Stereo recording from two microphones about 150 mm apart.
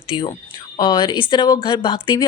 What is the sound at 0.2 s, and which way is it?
Speech, 30° left (ahead or behind).